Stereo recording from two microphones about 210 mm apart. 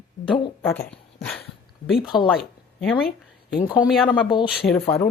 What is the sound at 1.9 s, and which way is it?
Speech, centre (ahead or behind).